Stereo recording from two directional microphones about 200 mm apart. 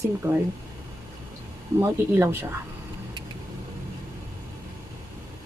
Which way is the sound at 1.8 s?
15° right (ahead or behind).